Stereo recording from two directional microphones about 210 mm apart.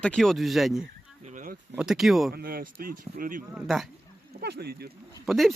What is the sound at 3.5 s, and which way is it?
Speech, 5° right (ahead or behind).